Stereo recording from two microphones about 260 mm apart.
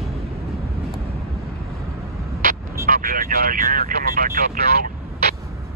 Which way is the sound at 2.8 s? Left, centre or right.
Right.